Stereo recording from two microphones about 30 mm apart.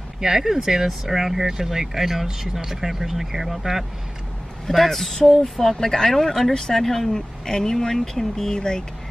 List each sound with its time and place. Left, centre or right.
0.2 s speech: centre
4.6 s speech: centre
5.4 s speech: centre
8.5 s speech: left